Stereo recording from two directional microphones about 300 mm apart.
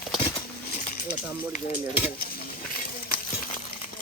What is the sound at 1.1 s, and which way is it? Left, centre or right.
Speech, left.